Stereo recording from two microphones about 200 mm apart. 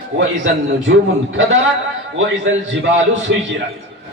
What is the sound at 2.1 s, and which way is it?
A man's voice, 75° right (ahead or behind).